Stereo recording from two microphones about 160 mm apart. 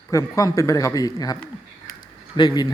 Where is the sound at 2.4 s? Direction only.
25° left (ahead or behind).